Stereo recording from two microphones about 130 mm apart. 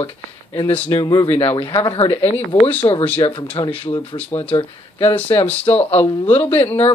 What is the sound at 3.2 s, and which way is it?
Speech, 35° left (ahead or behind).